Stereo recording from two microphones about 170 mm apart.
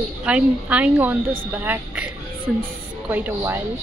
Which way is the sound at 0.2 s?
5° right (ahead or behind).